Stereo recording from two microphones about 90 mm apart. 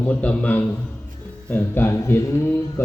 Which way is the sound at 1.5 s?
25° left (ahead or behind).